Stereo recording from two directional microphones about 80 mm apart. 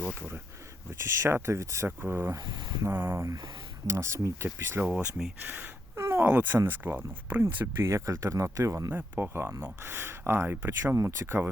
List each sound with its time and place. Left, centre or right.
0.9 s speech: right
2.5 s speech: right
2.8 s speech: right
3.8 s speech: right
6.0 s a sound: right
6.2 s speech: right
7.4 s speech: right
8.9 s speech: right